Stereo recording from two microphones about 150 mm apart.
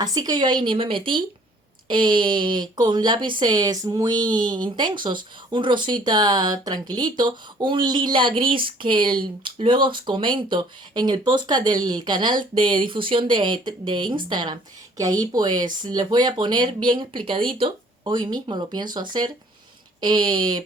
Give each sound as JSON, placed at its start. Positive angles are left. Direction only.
{"t": 0.0, "sound": "speech", "side_deg": -25}